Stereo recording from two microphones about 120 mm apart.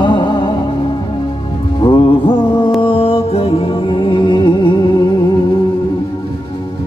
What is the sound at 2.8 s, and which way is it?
Music, 50° left (ahead or behind).